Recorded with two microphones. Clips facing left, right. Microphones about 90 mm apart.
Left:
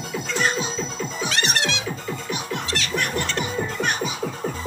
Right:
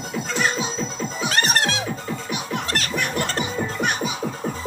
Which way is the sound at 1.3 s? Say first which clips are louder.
Right 4 dB; 45° right (ahead or behind).